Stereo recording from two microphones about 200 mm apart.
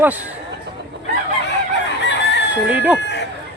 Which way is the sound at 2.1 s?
60° left (ahead or behind).